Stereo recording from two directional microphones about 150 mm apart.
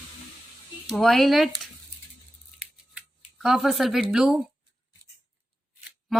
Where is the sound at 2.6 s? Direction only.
5° right (ahead or behind).